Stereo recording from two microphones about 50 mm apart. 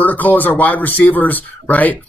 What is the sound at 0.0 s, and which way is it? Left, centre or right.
Speech, left.